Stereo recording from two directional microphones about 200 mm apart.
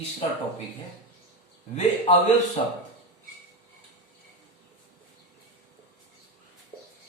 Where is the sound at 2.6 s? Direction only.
30° left (ahead or behind).